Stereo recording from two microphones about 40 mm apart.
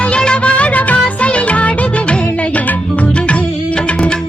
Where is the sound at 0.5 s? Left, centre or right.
Left.